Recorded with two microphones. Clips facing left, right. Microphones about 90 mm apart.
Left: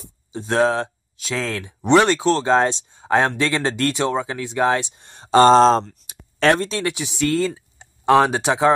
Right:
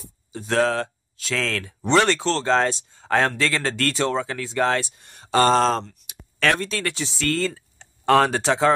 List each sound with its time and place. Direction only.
0.3 s speech: 20° left (ahead or behind)
5.9 s a sound: 35° left (ahead or behind)
6.8 s speech: 15° left (ahead or behind)